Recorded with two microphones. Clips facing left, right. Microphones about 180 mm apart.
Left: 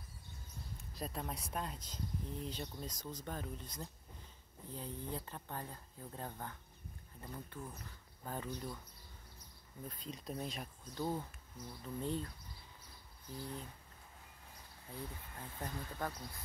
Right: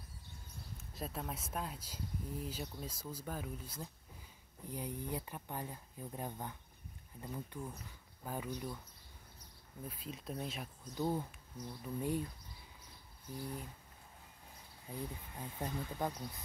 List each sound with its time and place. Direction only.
0.9 s speech: centre (ahead or behind)
9.8 s speech: 5° right (ahead or behind)
13.3 s speech: 10° right (ahead or behind)
14.9 s speech: 15° right (ahead or behind)